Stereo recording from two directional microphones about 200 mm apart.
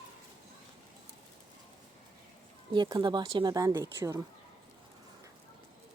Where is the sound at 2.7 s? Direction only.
25° right (ahead or behind).